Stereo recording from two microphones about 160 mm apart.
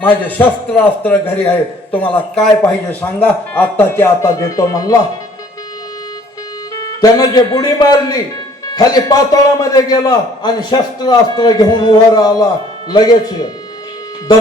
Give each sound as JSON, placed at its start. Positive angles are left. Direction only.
{"t": 0.0, "sound": "a man's voice", "side_deg": 10}
{"t": 1.9, "sound": "a man's voice", "side_deg": 35}
{"t": 2.1, "sound": "a man's voice", "side_deg": 5}
{"t": 6.7, "sound": "a man's voice", "side_deg": 25}